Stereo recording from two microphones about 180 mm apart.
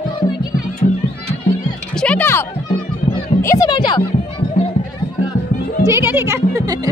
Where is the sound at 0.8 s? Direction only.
50° left (ahead or behind).